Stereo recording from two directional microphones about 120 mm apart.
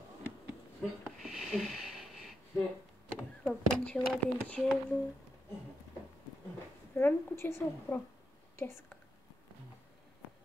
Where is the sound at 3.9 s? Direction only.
10° left (ahead or behind).